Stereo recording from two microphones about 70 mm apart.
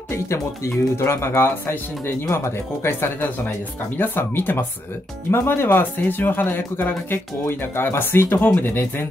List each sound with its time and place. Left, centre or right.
0.1 s speech: left